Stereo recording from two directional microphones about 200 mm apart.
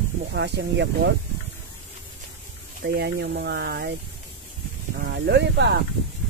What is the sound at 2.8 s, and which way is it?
Speech, 50° right (ahead or behind).